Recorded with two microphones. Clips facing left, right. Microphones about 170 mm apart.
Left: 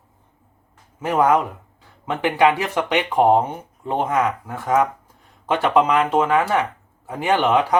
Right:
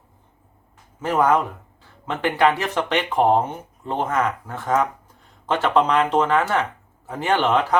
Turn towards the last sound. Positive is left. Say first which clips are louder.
# left 2 dB
turn(degrees=10)  # may be behind; listen again after turning